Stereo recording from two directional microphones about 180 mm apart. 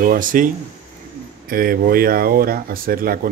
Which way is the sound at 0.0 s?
50° right (ahead or behind).